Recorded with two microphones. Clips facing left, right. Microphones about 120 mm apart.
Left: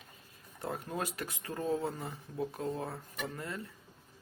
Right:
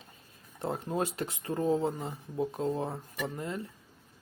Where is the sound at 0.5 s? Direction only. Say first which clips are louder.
Right 5 dB; 25° right (ahead or behind).